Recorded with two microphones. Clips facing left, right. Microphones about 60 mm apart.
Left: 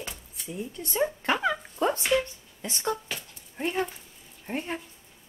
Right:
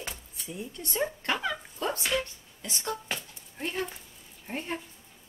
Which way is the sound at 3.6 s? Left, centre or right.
Centre.